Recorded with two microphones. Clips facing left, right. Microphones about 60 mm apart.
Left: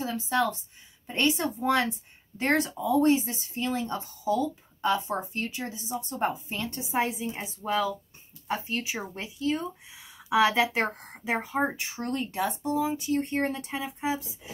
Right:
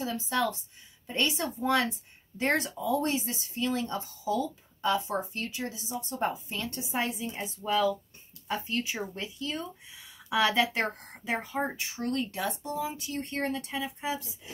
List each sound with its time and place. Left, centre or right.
0.3 s a woman's voice: left; by 11.5 s centre
11.8 s speech: left